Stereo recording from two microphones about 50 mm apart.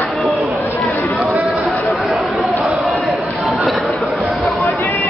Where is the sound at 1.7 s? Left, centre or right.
Centre.